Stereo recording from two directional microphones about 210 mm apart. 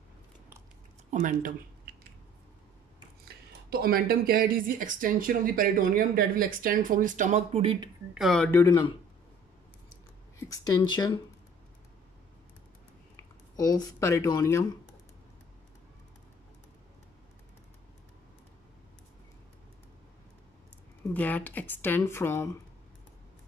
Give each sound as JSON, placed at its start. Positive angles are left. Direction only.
{"t": 1.1, "sound": "speech", "side_deg": -40}
{"t": 3.7, "sound": "speech", "side_deg": -45}
{"t": 8.1, "sound": "speech", "side_deg": 0}
{"t": 8.5, "sound": "speech", "side_deg": 15}
{"t": 10.4, "sound": "a woman's voice", "side_deg": 15}
{"t": 13.1, "sound": "speech", "side_deg": 15}
{"t": 21.1, "sound": "a woman's voice", "side_deg": 5}